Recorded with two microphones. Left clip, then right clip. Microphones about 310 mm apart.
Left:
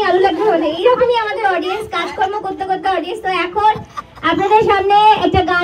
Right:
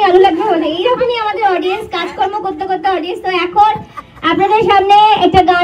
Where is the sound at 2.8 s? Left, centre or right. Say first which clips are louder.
Right 2 dB; right.